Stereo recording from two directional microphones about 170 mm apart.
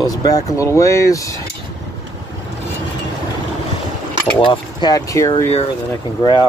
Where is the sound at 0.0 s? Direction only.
20° left (ahead or behind).